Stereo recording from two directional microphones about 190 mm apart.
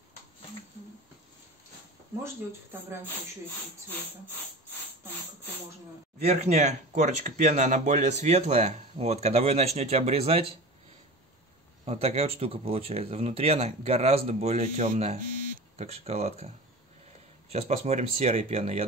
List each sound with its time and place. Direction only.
6.2 s speech: 35° right (ahead or behind)
11.8 s speech: 35° right (ahead or behind)
17.5 s speech: 35° right (ahead or behind)